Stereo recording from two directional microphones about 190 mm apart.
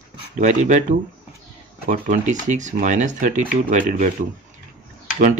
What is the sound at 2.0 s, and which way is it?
Speech, 40° right (ahead or behind).